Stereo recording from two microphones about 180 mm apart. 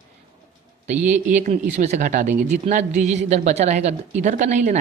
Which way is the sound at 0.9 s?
10° right (ahead or behind).